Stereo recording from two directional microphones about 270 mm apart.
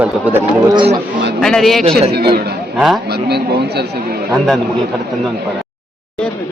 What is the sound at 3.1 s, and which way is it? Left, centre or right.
Speech, right.